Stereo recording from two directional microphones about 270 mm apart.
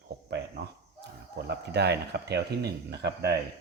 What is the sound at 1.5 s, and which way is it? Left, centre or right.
Speech, right.